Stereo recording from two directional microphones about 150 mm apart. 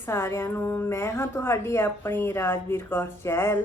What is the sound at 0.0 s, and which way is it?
A woman's voice, 15° left (ahead or behind).